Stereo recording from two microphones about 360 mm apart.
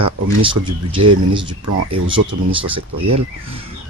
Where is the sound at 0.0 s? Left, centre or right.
Centre.